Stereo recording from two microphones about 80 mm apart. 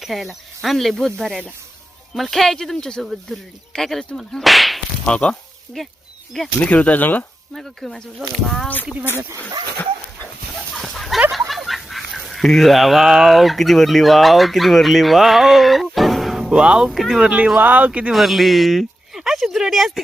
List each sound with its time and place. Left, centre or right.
0.0 s speech: centre
5.0 s speech: centre
6.6 s speech: centre
7.5 s speech: centre
8.6 s speech: left
10.8 s a sound: centre
11.3 s speech: centre
18.1 s speech: centre